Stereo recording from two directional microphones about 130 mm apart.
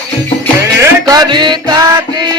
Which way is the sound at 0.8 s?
30° right (ahead or behind).